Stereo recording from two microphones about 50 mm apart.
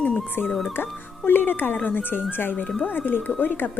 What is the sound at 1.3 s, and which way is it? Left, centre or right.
Speech, left.